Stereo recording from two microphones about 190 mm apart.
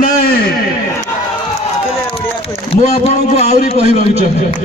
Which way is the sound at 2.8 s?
35° left (ahead or behind).